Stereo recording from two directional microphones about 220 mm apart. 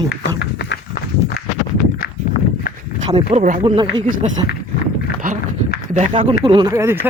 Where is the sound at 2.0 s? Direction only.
40° left (ahead or behind).